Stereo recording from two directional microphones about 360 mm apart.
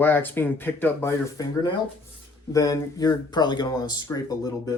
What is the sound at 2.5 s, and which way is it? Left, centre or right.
Speech, centre.